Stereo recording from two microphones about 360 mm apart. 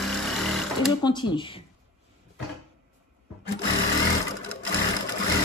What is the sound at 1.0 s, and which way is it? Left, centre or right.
Speech, centre.